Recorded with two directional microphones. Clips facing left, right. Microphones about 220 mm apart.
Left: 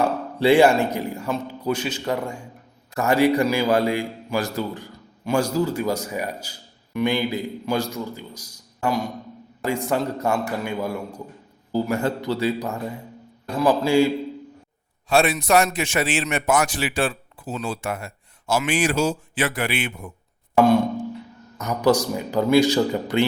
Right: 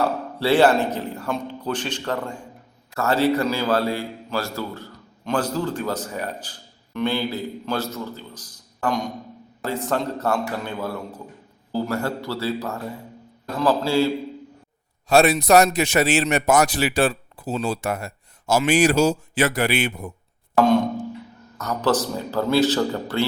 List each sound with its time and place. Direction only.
0.0 s a man's voice: 15° left (ahead or behind)
15.1 s a man's voice: 40° right (ahead or behind)
21.6 s a man's voice: 15° left (ahead or behind)